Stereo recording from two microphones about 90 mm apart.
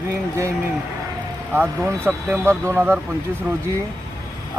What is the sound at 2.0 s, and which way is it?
Speech, 20° right (ahead or behind).